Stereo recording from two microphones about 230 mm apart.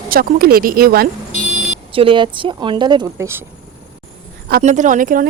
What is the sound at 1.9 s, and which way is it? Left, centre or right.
Speech, right.